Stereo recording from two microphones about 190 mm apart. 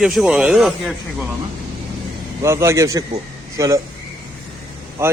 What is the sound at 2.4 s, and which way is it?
A man's voice, 15° right (ahead or behind).